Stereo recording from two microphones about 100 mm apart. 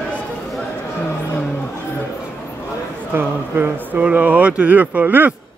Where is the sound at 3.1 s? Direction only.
20° right (ahead or behind).